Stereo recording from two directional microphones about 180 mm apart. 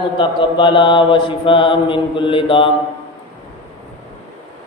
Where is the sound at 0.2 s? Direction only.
25° left (ahead or behind).